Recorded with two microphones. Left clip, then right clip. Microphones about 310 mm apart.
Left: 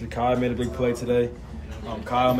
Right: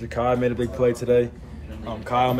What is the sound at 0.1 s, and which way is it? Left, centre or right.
Speech, centre.